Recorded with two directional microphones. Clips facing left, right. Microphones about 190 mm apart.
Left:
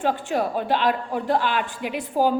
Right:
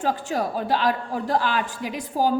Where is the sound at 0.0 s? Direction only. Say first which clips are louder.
Left 2 dB; 40° right (ahead or behind).